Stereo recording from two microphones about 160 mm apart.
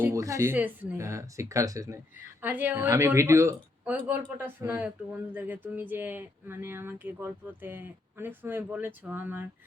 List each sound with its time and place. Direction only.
0.0 s a woman's voice: 20° right (ahead or behind)